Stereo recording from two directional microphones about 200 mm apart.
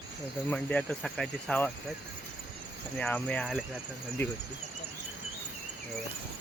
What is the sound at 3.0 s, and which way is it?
Speech, 5° left (ahead or behind).